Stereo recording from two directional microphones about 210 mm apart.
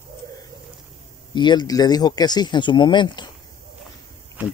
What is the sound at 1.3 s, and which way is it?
Speech, 20° left (ahead or behind).